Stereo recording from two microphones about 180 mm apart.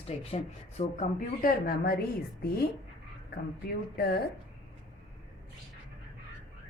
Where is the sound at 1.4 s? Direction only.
55° left (ahead or behind).